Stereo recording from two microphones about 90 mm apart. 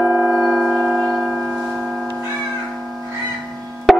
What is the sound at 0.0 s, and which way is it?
Singing bowl, 5° right (ahead or behind).